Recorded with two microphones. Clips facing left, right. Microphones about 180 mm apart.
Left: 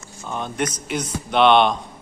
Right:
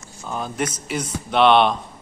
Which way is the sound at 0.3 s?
5° right (ahead or behind).